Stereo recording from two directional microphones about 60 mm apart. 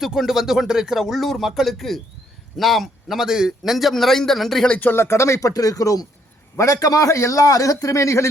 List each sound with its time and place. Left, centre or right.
0.0 s a man's voice: centre
4.9 s a man's voice: left